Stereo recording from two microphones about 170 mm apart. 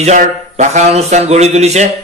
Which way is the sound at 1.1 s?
40° right (ahead or behind).